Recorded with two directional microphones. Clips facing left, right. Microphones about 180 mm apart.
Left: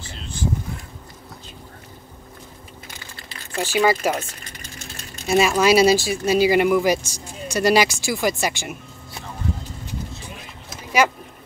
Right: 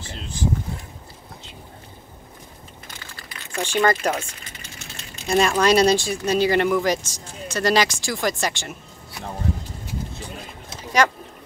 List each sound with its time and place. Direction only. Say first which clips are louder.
3.5 s speech: left 1 dB; 5° left (ahead or behind)
4.5 s a sound: left 2 dB; 40° left (ahead or behind)
5.2 s speech: left 1 dB; 5° left (ahead or behind)
11.0 s speech: left 1 dB; 10° left (ahead or behind)